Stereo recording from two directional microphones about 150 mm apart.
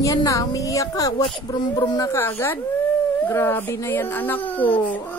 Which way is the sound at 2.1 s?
15° left (ahead or behind).